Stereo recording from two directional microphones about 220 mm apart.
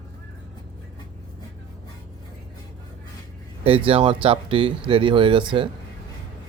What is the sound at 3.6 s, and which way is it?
Speech, 25° right (ahead or behind).